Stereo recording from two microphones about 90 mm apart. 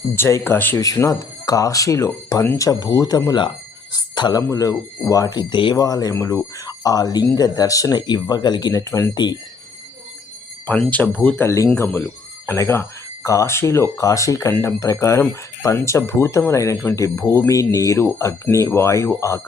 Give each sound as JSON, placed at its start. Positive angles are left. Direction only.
{"t": 0.2, "sound": "speech", "side_deg": 30}
{"t": 0.8, "sound": "speech", "side_deg": 35}
{"t": 3.9, "sound": "speech", "side_deg": 50}
{"t": 4.4, "sound": "speech", "side_deg": 40}
{"t": 5.4, "sound": "speech", "side_deg": 60}
{"t": 5.7, "sound": "speech", "side_deg": 40}
{"t": 8.8, "sound": "speech", "side_deg": 30}
{"t": 9.1, "sound": "speech", "side_deg": 55}
{"t": 10.7, "sound": "speech", "side_deg": 15}
{"t": 11.4, "sound": "speech", "side_deg": 35}
{"t": 11.8, "sound": "speech", "side_deg": 20}